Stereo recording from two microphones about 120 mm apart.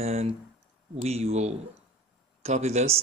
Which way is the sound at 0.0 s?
60° right (ahead or behind).